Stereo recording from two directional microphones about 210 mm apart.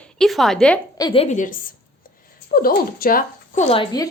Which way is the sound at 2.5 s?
45° left (ahead or behind).